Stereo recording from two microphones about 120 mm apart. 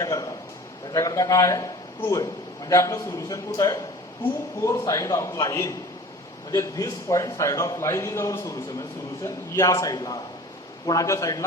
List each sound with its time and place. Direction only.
0.0 s a man's voice: 30° left (ahead or behind)